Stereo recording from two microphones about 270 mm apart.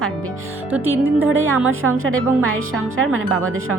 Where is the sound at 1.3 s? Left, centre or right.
Right.